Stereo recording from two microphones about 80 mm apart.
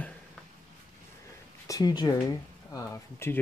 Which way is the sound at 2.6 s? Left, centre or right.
Left.